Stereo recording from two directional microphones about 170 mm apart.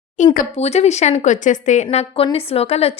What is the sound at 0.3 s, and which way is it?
A woman's voice, 40° left (ahead or behind).